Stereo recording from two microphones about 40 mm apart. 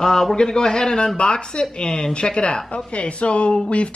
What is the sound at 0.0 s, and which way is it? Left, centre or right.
Speech, centre.